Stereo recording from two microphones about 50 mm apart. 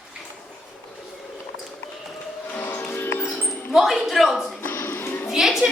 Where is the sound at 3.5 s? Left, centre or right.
Centre.